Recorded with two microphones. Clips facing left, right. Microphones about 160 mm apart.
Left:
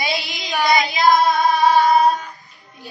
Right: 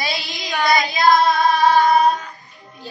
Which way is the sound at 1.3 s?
15° left (ahead or behind).